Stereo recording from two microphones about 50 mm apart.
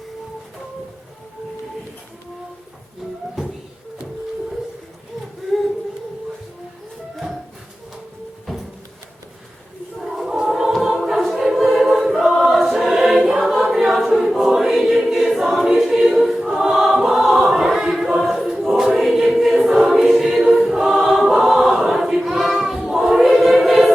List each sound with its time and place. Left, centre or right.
10.0 s music: centre
10.7 s a capella: centre
11.5 s choir: centre